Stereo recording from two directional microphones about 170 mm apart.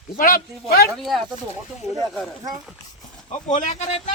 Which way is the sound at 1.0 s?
Centre (ahead or behind).